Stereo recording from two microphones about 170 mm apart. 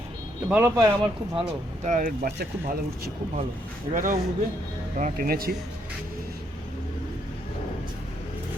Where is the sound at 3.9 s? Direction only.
50° right (ahead or behind).